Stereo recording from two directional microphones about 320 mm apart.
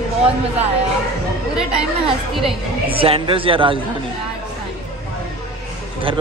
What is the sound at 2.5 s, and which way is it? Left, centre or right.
A woman's voice, centre.